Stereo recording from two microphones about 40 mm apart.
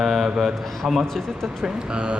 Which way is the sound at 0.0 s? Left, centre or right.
Centre.